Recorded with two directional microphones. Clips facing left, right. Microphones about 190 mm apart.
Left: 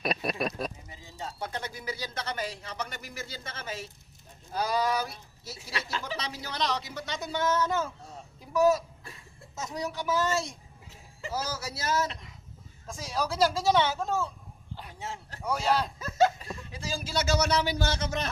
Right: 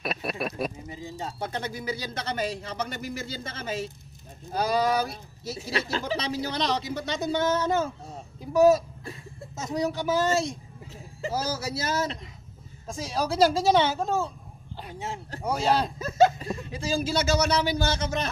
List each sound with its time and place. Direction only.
0.0 s speech: 5° right (ahead or behind)
1.2 s a man's voice: 25° right (ahead or behind)
14.8 s speech: 20° right (ahead or behind)